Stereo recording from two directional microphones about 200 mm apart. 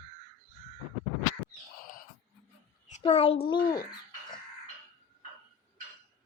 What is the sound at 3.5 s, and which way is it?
Speech, 20° left (ahead or behind).